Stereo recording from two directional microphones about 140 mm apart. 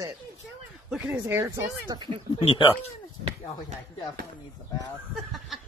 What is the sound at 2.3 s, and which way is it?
Speech, 40° left (ahead or behind).